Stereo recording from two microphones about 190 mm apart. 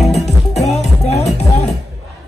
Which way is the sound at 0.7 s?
35° left (ahead or behind).